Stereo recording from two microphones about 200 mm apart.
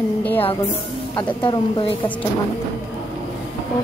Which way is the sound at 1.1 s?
20° left (ahead or behind).